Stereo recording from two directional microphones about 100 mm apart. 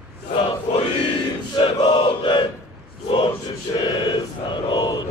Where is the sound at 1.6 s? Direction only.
60° left (ahead or behind).